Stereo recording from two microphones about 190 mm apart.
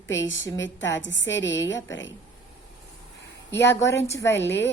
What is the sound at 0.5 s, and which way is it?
A woman's voice, 75° left (ahead or behind).